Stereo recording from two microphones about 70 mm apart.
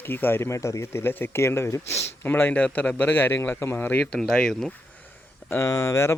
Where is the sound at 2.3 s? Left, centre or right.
Left.